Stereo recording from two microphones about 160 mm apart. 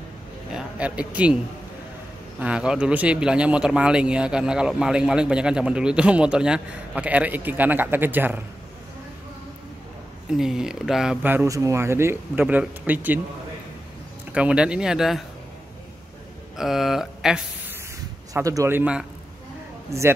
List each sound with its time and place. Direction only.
0.5 s a man's voice: 5° right (ahead or behind)
2.4 s speech: 5° right (ahead or behind)
10.3 s speech: 5° right (ahead or behind)
14.3 s speech: 5° right (ahead or behind)
16.5 s speech: centre (ahead or behind)
18.3 s speech: 20° right (ahead or behind)